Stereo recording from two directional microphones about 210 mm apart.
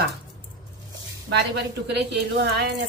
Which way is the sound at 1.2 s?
55° right (ahead or behind).